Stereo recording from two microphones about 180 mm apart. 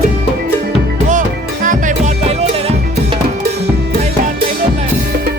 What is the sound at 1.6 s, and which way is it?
Music, 40° right (ahead or behind).